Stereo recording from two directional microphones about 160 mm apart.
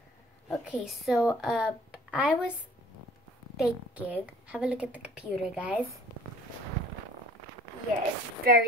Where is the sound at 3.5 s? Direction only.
5° right (ahead or behind).